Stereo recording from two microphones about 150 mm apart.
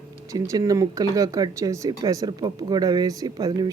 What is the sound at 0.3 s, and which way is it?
Speech, 25° right (ahead or behind).